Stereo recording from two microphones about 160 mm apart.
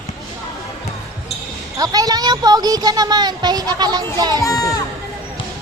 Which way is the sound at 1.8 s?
25° right (ahead or behind).